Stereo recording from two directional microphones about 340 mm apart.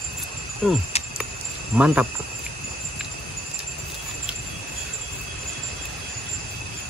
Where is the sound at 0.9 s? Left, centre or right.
Centre.